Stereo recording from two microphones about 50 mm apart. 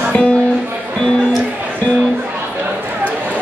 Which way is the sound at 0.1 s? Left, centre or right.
Centre.